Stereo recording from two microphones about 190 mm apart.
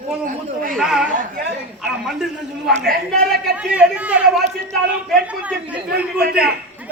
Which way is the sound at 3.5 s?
5° right (ahead or behind).